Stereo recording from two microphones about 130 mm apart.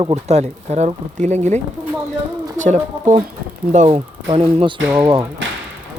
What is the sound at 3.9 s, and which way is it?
Speech, 45° right (ahead or behind).